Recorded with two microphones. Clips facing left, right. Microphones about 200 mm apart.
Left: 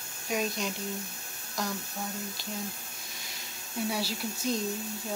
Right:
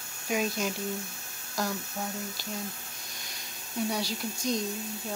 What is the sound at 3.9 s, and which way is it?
Speech, 5° left (ahead or behind).